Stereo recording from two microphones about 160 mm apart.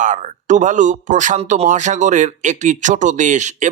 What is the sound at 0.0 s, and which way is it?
Speech, 50° right (ahead or behind).